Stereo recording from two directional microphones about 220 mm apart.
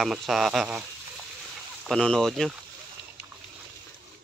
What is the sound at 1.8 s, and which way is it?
Speech, 5° left (ahead or behind).